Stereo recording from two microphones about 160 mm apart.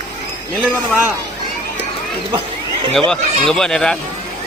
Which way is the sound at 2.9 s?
5° left (ahead or behind).